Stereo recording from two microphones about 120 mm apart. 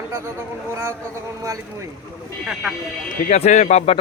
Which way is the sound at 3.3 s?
75° left (ahead or behind).